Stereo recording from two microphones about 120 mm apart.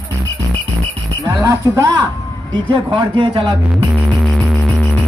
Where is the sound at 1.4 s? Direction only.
25° right (ahead or behind).